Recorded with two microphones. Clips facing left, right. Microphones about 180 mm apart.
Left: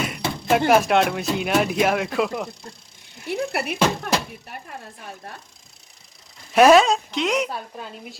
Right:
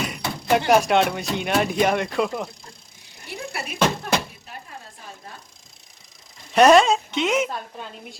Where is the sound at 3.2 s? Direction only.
60° left (ahead or behind).